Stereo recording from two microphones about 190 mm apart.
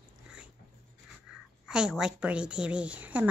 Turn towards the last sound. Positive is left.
turn(degrees=-10)  # may be behind; listen again after turning